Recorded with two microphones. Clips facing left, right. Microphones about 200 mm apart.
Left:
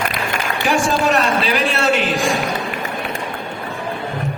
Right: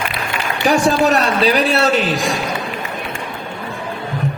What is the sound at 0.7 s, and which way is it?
A man's voice, 40° right (ahead or behind).